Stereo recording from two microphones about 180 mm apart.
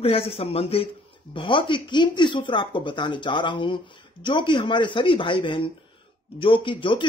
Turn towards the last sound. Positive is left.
turn(degrees=25)  # may be behind; listen again after turning